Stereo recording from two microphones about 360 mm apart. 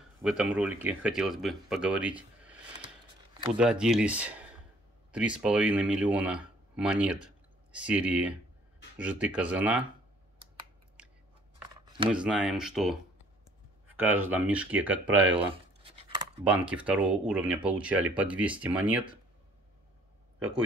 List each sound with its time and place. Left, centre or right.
0.2 s speech: centre
11.0 s scissors: centre
11.8 s a sound: centre
12.1 s speech: centre
15.8 s a sound: centre
16.6 s speech: centre